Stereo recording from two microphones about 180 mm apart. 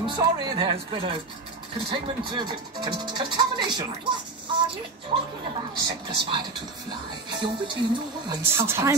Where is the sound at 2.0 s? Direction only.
25° right (ahead or behind).